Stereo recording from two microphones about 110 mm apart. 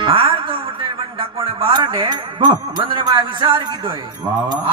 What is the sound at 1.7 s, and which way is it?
Speech, 45° right (ahead or behind).